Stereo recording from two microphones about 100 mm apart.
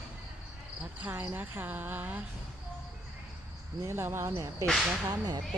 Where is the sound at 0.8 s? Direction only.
15° right (ahead or behind).